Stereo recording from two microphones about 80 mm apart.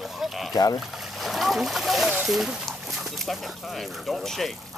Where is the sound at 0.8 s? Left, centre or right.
Centre.